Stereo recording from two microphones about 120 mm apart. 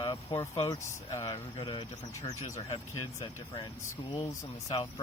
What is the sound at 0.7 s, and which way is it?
Speech, 25° left (ahead or behind).